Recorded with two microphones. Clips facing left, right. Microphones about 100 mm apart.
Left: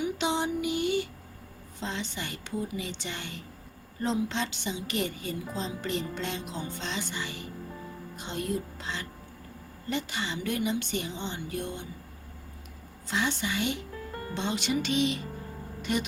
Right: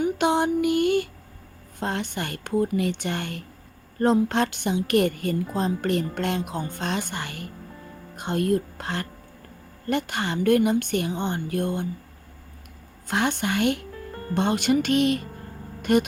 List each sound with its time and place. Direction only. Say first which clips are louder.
0.0 s music: right 7 dB; 55° right (ahead or behind)
1.8 s a woman's voice: right 7 dB; 55° right (ahead or behind)
13.1 s a woman's voice: right 6 dB; 55° right (ahead or behind)